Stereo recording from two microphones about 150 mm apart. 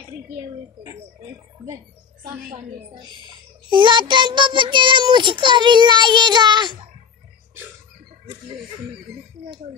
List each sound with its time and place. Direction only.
0.4 s a woman's voice: 20° right (ahead or behind)
2.9 s a child's voice: 30° right (ahead or behind)